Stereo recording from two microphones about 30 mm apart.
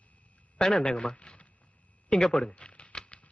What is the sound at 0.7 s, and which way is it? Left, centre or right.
Speech, left.